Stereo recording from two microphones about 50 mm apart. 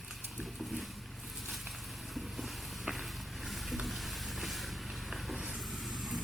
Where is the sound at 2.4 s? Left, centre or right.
Centre.